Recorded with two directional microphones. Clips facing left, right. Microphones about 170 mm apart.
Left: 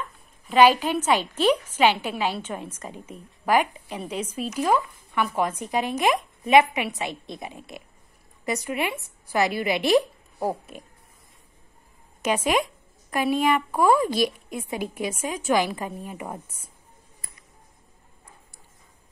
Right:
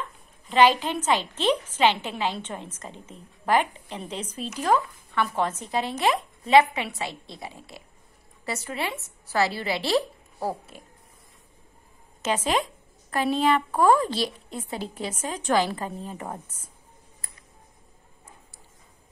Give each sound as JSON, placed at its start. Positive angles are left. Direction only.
{"t": 0.5, "sound": "a woman's voice", "side_deg": 10}
{"t": 12.2, "sound": "a woman's voice", "side_deg": 15}